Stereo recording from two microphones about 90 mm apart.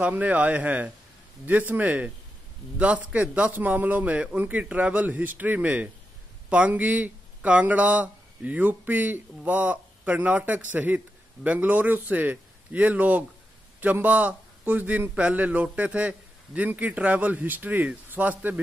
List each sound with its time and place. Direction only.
0.0 s a man's voice: 15° right (ahead or behind)